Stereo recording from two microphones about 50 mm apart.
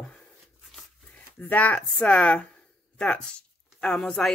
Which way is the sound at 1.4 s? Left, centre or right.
Left.